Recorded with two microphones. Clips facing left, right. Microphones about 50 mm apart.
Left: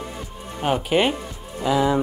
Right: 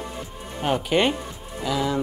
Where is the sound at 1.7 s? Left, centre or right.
Centre.